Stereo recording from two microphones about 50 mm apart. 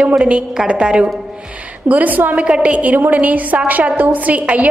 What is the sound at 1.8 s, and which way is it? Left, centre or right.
Speech, right.